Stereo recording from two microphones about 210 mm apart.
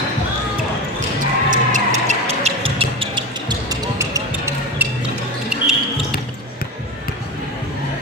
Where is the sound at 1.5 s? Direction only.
35° right (ahead or behind); by 5.7 s 5° right (ahead or behind).